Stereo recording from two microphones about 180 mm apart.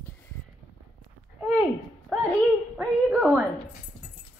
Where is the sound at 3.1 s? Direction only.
5° right (ahead or behind).